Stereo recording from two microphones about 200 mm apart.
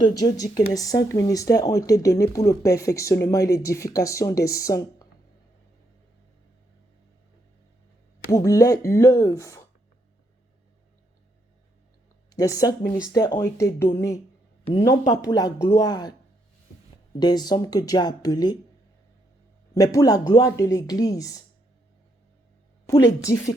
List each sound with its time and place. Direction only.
0.0 s speech: 20° left (ahead or behind)
8.3 s speech: 15° left (ahead or behind)
12.3 s speech: 15° left (ahead or behind)
17.2 s speech: 20° left (ahead or behind)
19.7 s speech: 15° left (ahead or behind)
22.9 s speech: 20° left (ahead or behind)